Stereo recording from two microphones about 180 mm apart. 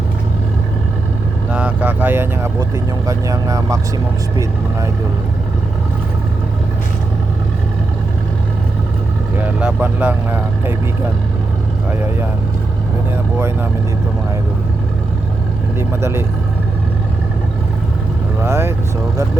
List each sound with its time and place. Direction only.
1.5 s speech: 10° right (ahead or behind)
9.4 s speech: 10° right (ahead or behind)
15.8 s speech: 15° right (ahead or behind)
18.4 s speech: 15° right (ahead or behind)